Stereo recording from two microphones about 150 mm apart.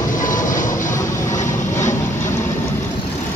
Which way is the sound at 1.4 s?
20° left (ahead or behind).